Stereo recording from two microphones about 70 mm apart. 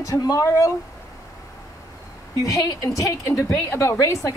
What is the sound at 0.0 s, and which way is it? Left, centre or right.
Speech, left.